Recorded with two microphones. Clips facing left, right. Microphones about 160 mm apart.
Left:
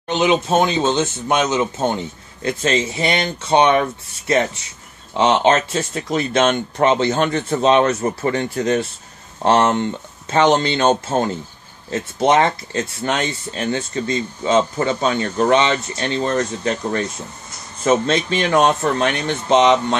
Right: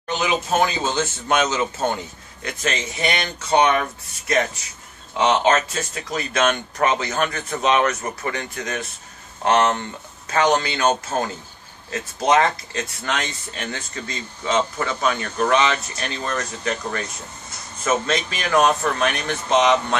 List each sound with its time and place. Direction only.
0.1 s speech: 25° left (ahead or behind)
2.4 s speech: 30° left (ahead or behind)